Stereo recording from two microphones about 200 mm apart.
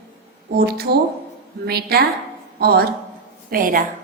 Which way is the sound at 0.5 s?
50° right (ahead or behind).